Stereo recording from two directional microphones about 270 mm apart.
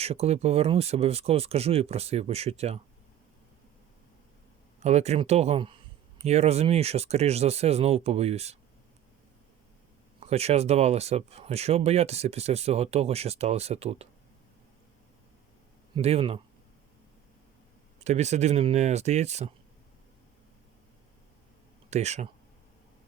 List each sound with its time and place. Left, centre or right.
0.0 s speech: right
4.8 s speech: right
10.2 s speech: right
16.0 s speech: right
18.0 s speech: right
21.8 s speech: right